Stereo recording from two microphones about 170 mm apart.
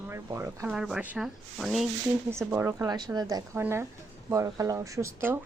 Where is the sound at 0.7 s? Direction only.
5° right (ahead or behind).